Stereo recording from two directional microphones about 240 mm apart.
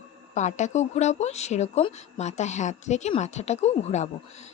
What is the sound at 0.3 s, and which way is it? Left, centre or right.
Speech, left.